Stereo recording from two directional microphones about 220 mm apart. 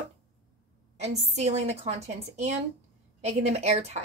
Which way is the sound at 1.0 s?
30° right (ahead or behind).